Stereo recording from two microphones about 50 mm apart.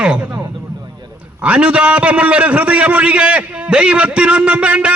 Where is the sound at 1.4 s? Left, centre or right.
Right.